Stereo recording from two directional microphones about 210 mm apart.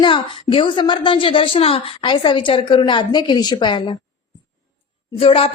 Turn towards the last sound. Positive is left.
turn(degrees=25)  # may be behind; listen again after turning